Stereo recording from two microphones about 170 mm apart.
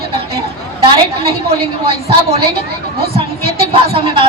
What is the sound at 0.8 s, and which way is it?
Speech, 35° right (ahead or behind).